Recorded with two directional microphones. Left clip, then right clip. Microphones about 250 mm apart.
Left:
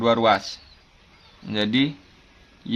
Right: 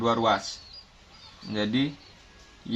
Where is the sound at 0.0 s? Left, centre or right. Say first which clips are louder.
Left 5 dB; centre.